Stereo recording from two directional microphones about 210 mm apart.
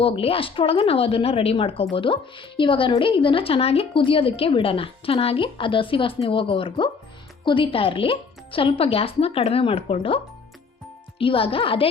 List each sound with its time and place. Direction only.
0.0 s speech: 25° left (ahead or behind)
11.2 s speech: 25° left (ahead or behind)